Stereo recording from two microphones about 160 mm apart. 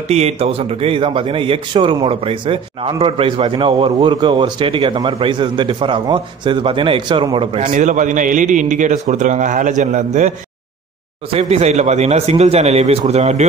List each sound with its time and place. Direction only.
0.1 s a man's voice: 40° right (ahead or behind)
7.6 s a man's voice: 50° right (ahead or behind)
11.3 s a man's voice: 45° right (ahead or behind)